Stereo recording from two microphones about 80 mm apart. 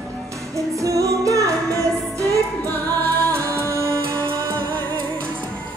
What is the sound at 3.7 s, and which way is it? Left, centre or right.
Music, left.